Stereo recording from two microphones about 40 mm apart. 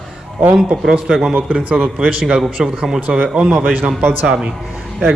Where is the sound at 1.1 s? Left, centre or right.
Centre.